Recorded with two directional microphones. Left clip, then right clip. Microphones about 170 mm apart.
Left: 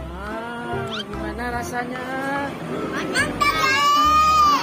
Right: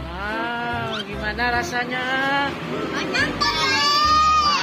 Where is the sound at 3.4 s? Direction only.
20° left (ahead or behind).